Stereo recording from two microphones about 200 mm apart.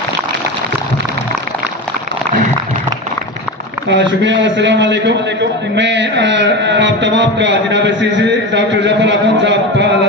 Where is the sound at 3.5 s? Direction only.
Centre (ahead or behind).